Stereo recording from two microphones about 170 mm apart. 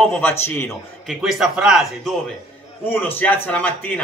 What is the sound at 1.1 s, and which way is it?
Speech, centre (ahead or behind).